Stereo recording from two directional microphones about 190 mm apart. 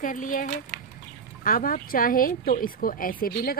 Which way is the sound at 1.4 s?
45° left (ahead or behind).